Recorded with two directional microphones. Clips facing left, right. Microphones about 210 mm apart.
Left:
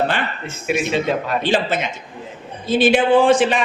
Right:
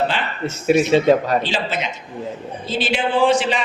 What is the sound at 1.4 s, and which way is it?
A man's voice, 55° left (ahead or behind).